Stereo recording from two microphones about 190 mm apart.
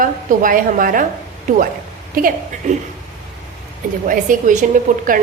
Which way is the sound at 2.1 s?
50° right (ahead or behind).